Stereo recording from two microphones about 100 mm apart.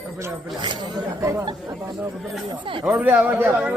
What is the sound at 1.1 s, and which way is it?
Speech, 30° right (ahead or behind).